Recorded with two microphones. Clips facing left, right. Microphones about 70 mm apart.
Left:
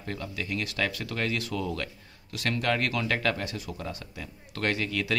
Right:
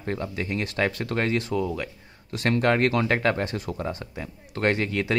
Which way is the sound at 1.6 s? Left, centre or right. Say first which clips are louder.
Right 4 dB; centre.